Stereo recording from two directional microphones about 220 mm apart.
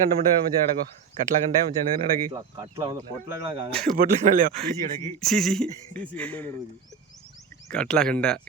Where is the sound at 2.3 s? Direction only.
20° right (ahead or behind).